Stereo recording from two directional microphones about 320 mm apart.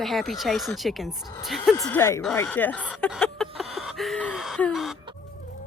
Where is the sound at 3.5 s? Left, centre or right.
Centre.